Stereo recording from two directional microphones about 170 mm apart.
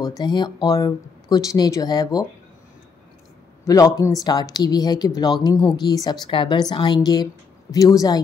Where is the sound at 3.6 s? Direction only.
20° left (ahead or behind).